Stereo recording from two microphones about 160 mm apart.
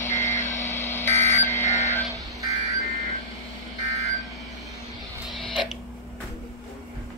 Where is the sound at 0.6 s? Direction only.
15° left (ahead or behind).